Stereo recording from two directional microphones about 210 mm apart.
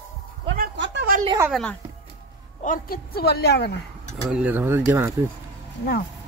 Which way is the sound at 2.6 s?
40° left (ahead or behind).